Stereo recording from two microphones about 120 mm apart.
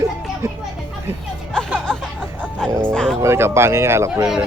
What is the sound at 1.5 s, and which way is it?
Music, 5° left (ahead or behind).